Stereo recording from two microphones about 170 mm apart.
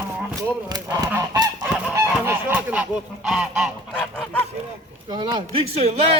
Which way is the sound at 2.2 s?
10° right (ahead or behind).